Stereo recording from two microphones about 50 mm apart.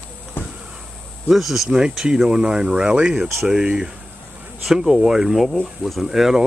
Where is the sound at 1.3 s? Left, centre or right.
Centre.